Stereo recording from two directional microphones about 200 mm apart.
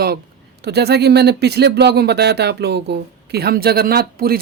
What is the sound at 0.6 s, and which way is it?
Speech, 55° right (ahead or behind).